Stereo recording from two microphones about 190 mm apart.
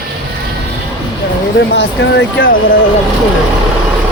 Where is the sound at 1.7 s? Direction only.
70° left (ahead or behind).